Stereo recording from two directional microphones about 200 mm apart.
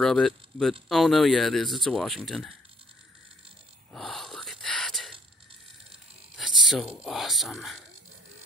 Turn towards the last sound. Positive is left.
turn(degrees=0)  # may be behind; listen again after turning